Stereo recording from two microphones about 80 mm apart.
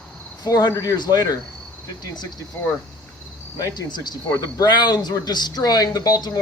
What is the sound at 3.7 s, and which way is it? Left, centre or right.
Speech, left.